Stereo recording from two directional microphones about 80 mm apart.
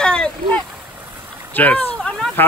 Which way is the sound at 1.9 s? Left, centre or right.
Centre.